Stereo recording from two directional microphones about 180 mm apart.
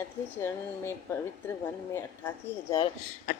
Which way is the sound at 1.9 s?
15° left (ahead or behind).